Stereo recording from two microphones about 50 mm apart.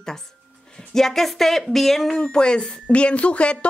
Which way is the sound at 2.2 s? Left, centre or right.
Centre.